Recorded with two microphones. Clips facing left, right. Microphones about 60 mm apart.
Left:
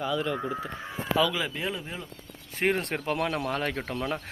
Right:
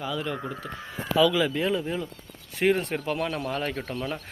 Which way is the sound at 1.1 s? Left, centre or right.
Left.